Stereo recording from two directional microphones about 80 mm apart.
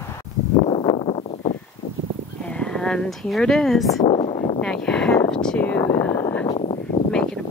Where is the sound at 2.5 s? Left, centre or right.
Centre.